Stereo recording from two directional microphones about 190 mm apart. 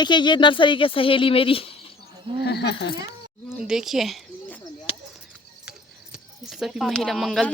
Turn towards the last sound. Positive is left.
turn(degrees=0)  # may be behind; listen again after turning